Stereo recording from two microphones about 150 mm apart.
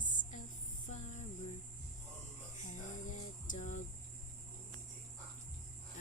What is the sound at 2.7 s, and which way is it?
Music, 55° left (ahead or behind).